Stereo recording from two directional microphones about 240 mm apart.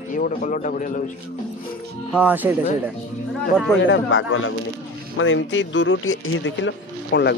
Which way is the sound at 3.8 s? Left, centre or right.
Left.